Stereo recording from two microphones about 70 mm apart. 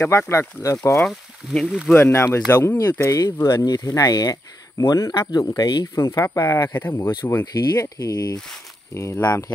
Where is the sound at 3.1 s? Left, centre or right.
Left.